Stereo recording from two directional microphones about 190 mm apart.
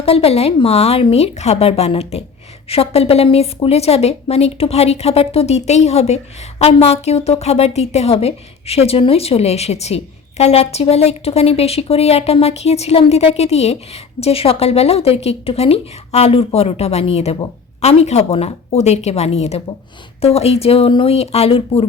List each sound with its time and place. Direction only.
0.0 s a woman's voice: 30° left (ahead or behind)